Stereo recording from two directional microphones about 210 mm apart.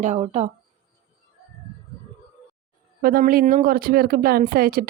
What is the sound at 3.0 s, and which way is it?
Speech, 45° right (ahead or behind).